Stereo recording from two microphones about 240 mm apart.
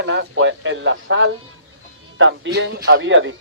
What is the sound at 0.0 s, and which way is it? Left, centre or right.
Speech, right.